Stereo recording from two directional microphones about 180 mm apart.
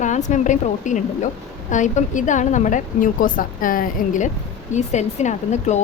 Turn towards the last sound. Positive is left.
turn(degrees=40)  # may be behind; listen again after turning